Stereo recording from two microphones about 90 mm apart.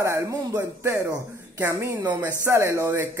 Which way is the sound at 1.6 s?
30° right (ahead or behind).